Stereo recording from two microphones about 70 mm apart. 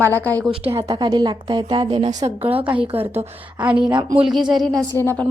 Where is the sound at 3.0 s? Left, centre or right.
Right.